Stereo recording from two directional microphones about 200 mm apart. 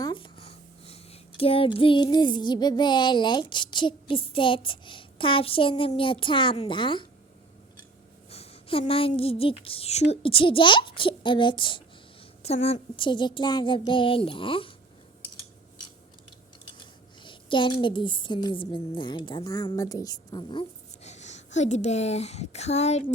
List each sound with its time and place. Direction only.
0.0 s speech: 25° left (ahead or behind)
8.3 s a woman's voice: 30° left (ahead or behind)
16.7 s speech: 25° left (ahead or behind)